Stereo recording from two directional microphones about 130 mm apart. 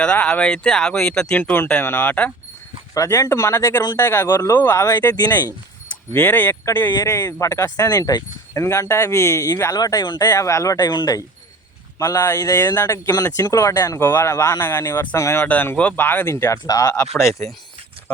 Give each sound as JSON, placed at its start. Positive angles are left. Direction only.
{"t": 0.0, "sound": "speech", "side_deg": 10}
{"t": 2.9, "sound": "speech", "side_deg": 25}
{"t": 5.0, "sound": "speech", "side_deg": 30}
{"t": 6.1, "sound": "speech", "side_deg": 15}